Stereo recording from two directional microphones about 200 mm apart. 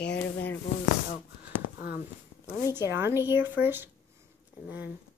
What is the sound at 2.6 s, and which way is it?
Speech, 20° left (ahead or behind).